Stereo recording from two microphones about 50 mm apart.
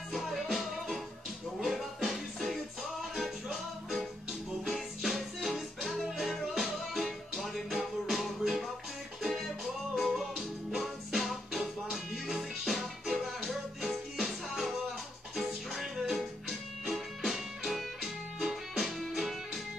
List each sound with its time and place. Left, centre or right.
0.1 s music: centre